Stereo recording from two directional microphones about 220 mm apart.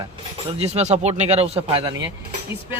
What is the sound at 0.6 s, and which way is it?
Speech, 30° right (ahead or behind).